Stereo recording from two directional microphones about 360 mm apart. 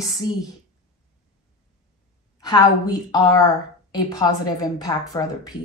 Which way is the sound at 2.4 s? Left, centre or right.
Centre.